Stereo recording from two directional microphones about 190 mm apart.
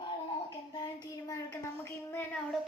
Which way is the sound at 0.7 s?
20° left (ahead or behind).